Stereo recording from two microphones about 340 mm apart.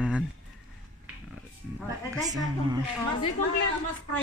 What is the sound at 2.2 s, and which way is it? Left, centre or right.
Speech, centre.